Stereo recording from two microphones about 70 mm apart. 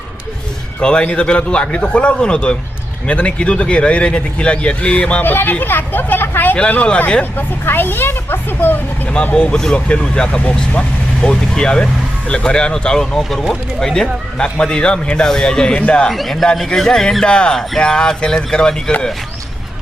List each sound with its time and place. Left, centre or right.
0.8 s speech: centre
5.2 s speech: left
6.6 s speech: centre
7.3 s speech: left
9.1 s a man's voice: centre